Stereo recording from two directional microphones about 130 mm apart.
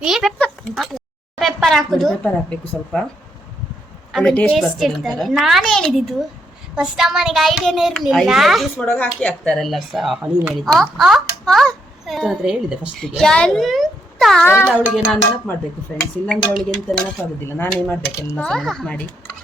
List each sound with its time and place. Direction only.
0.0 s speech: centre (ahead or behind)
0.3 s a sound: 5° left (ahead or behind)
2.2 s speech: 10° left (ahead or behind)
4.1 s speech: 5° left (ahead or behind)
8.8 s speech: 10° left (ahead or behind)
14.4 s a child's voice: 20° left (ahead or behind)
14.9 s speech: centre (ahead or behind)
15.9 s speech: 10° left (ahead or behind)
18.3 s speech: 5° left (ahead or behind)